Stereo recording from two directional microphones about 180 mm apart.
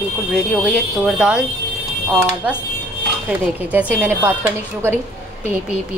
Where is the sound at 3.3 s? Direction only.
10° right (ahead or behind).